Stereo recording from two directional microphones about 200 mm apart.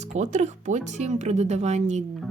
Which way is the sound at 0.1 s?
35° right (ahead or behind).